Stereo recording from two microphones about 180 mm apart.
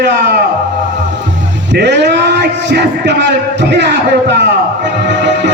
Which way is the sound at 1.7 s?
70° right (ahead or behind).